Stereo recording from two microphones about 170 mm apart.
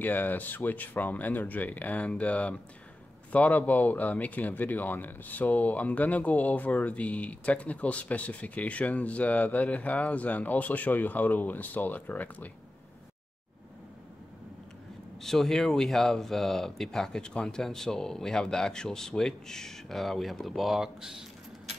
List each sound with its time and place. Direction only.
0.0 s speech: 10° left (ahead or behind)
15.2 s speech: centre (ahead or behind)